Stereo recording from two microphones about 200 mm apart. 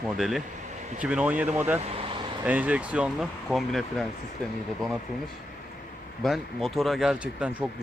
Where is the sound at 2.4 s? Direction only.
5° right (ahead or behind).